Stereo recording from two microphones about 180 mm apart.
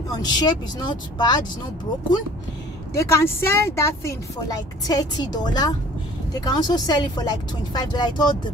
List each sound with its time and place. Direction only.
0.1 s speech: 25° left (ahead or behind)
2.9 s speech: 15° left (ahead or behind)